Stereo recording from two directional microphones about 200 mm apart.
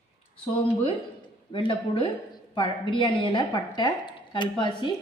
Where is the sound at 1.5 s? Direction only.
25° left (ahead or behind).